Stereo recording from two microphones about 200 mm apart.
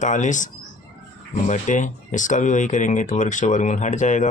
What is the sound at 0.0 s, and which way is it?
Speech, 40° left (ahead or behind).